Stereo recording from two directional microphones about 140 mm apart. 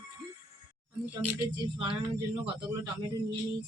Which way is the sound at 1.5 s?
35° right (ahead or behind).